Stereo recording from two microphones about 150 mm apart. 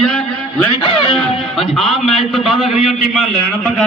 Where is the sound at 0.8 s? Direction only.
35° left (ahead or behind).